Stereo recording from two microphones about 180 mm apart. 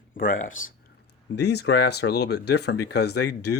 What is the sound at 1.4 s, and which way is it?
Speech, 70° left (ahead or behind).